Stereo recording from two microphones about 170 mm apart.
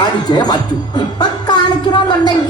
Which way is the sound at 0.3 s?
25° left (ahead or behind).